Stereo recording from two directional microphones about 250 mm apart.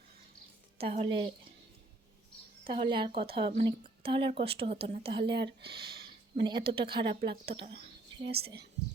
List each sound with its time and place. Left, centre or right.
0.8 s speech: right
2.7 s speech: centre
5.3 s speech: right
6.3 s speech: centre
8.3 s speech: right